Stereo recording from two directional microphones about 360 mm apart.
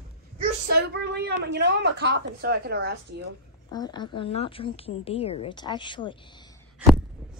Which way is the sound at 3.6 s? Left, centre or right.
Centre.